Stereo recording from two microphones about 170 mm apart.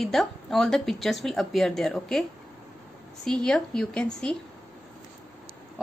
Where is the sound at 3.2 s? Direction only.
5° left (ahead or behind).